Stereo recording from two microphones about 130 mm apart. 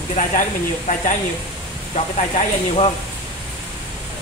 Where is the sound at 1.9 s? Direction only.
55° left (ahead or behind).